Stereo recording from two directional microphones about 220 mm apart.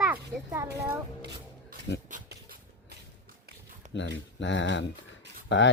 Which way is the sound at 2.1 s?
45° right (ahead or behind).